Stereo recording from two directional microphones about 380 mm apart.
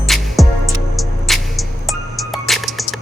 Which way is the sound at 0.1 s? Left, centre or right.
Centre.